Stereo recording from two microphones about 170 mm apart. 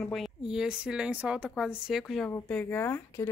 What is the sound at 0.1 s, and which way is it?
A woman's voice, centre (ahead or behind).